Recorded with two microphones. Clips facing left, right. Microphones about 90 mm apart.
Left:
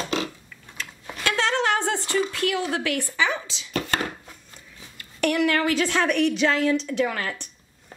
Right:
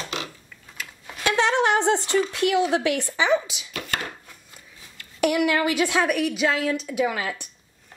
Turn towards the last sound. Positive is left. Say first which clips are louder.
# right 1 dB
turn(degrees=-5)  # may be behind; listen again after turning